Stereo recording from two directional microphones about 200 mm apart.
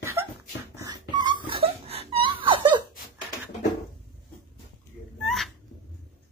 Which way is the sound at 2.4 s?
25° right (ahead or behind).